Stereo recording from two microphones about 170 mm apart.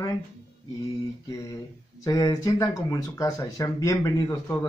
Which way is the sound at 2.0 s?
20° left (ahead or behind).